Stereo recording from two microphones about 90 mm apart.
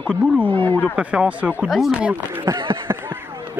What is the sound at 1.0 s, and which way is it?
Speech, 15° right (ahead or behind).